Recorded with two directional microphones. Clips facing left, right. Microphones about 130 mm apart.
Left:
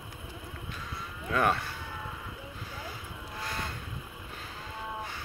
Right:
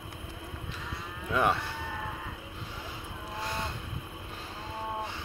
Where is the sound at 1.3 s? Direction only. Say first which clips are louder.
Even; 15° right (ahead or behind).